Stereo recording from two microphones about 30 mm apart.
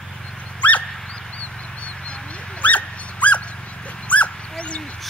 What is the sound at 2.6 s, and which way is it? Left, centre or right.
Dog, left.